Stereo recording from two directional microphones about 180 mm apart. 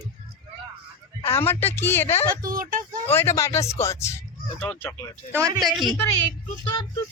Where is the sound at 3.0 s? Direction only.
10° left (ahead or behind).